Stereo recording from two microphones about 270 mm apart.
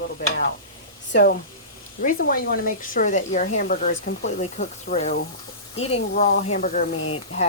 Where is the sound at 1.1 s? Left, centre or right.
Left.